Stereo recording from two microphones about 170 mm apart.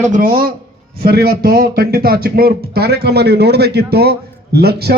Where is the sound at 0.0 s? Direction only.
50° right (ahead or behind).